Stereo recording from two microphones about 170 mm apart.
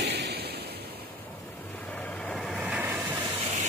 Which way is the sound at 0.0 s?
80° right.